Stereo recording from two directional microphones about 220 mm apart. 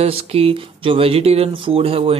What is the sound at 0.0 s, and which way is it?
Speech, 25° right (ahead or behind).